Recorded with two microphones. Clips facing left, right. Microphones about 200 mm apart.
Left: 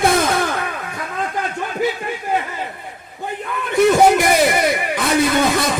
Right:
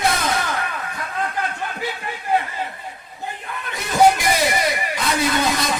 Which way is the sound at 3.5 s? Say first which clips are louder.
Left 15 dB; 55° left (ahead or behind).